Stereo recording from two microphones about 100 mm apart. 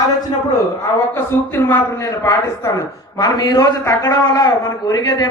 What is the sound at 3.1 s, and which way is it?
A man's voice, 45° left (ahead or behind).